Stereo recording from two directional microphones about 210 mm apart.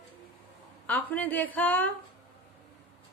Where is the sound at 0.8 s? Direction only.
5° left (ahead or behind).